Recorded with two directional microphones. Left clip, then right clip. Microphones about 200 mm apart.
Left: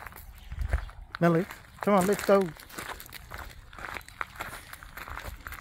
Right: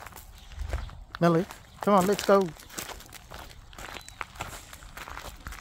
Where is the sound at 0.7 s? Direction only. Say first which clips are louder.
Left 1 dB; centre (ahead or behind).